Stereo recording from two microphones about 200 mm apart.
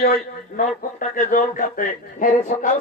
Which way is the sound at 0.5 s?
40° left (ahead or behind).